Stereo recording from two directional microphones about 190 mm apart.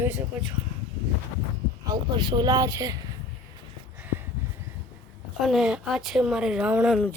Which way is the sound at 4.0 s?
10° right (ahead or behind).